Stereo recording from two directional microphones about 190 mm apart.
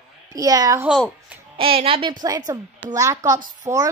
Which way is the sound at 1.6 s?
30° right (ahead or behind).